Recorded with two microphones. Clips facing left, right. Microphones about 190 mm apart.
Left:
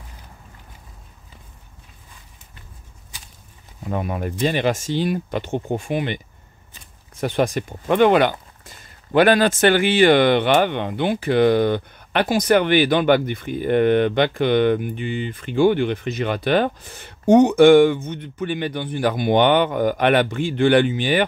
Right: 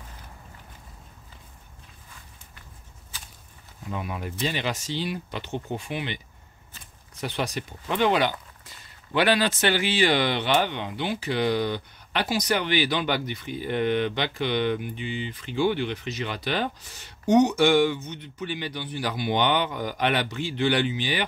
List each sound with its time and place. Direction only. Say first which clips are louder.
3.9 s speech: left 7 dB; 50° left (ahead or behind)